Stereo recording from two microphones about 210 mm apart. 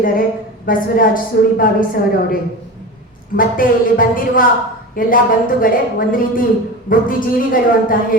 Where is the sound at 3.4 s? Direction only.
40° left (ahead or behind).